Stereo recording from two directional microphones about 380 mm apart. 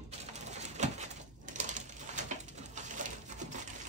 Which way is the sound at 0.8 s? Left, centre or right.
Centre.